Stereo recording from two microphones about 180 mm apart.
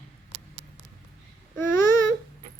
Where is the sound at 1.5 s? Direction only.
15° left (ahead or behind).